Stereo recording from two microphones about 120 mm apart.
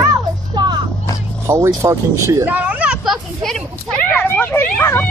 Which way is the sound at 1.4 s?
20° right (ahead or behind).